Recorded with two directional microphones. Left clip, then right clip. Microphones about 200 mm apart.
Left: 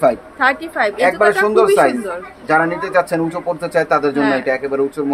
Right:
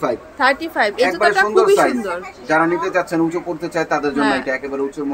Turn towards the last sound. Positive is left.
turn(degrees=40)  # may be behind; listen again after turning